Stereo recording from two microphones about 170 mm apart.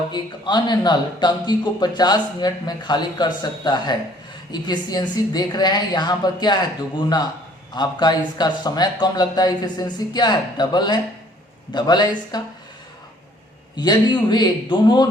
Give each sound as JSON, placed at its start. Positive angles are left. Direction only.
{"t": 0.1, "sound": "a man's voice", "side_deg": 25}
{"t": 13.7, "sound": "a man's voice", "side_deg": 25}